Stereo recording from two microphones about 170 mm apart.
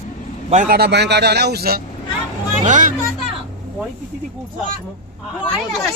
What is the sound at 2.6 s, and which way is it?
Speech, 50° right (ahead or behind).